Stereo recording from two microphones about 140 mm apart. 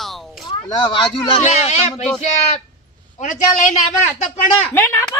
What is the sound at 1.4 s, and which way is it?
Speech, 55° left (ahead or behind).